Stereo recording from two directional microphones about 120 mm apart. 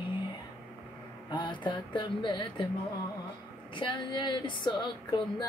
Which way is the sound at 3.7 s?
40° left (ahead or behind).